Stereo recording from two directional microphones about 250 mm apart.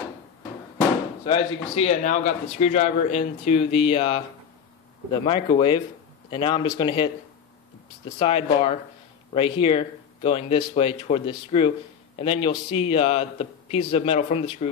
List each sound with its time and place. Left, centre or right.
1.2 s speech: left
5.2 s speech: left